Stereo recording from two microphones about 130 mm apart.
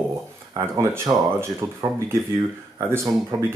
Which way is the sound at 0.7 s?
20° right (ahead or behind).